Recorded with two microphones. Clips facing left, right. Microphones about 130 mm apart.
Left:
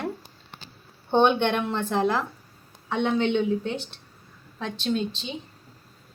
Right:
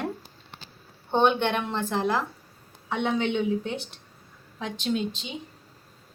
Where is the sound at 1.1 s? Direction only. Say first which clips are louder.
Left 2 dB; centre (ahead or behind).